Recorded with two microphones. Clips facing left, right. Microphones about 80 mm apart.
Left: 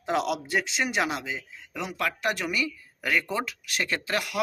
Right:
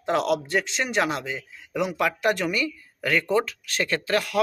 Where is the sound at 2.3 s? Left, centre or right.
Centre.